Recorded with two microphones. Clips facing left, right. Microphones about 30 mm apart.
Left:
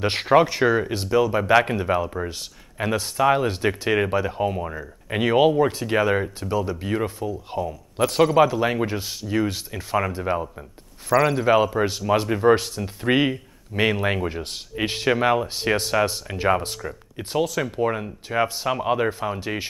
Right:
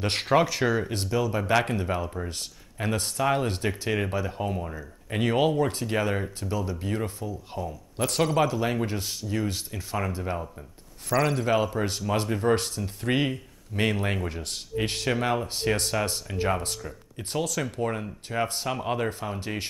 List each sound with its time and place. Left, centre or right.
0.0 s speech: centre
8.5 s speech: left
11.1 s speech: centre